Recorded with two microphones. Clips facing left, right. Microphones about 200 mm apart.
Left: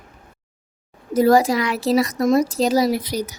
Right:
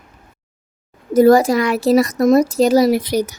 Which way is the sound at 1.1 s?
50° right (ahead or behind).